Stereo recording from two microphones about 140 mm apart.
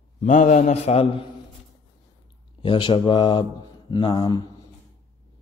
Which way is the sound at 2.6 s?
40° left (ahead or behind).